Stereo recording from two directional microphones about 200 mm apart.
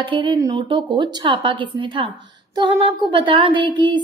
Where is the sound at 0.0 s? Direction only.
25° right (ahead or behind).